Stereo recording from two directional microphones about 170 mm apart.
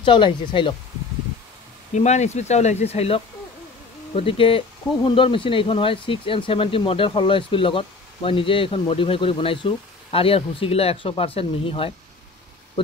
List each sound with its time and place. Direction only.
0.0 s speech: 30° left (ahead or behind)
2.0 s speech: 40° left (ahead or behind)